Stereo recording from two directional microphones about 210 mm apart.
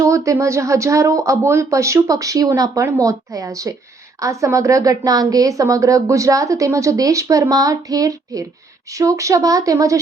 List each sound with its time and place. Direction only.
0.0 s a woman's voice: 15° right (ahead or behind)